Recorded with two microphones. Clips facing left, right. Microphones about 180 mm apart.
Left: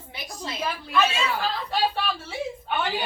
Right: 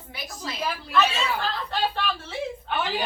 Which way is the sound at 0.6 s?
Centre (ahead or behind).